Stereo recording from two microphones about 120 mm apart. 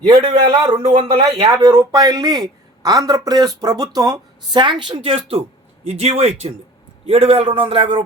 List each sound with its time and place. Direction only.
0.1 s speech: 40° right (ahead or behind)
0.8 s speech: 65° right (ahead or behind)
1.5 s speech: 35° right (ahead or behind); by 5.4 s 50° right (ahead or behind)
5.8 s a man's voice: 60° right (ahead or behind)